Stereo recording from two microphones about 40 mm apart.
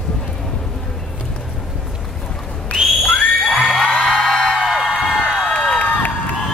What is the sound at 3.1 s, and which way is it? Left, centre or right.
Children shouting, left.